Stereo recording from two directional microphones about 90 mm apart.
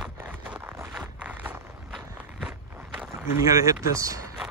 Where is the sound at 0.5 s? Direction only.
25° right (ahead or behind).